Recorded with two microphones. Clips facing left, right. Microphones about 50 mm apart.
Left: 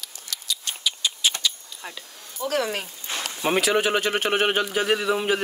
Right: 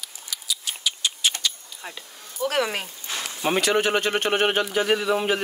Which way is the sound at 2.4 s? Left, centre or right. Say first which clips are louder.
Right 1 dB; right.